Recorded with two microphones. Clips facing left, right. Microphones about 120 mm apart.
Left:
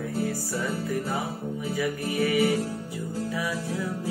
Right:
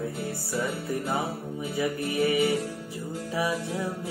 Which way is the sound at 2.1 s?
20° right (ahead or behind).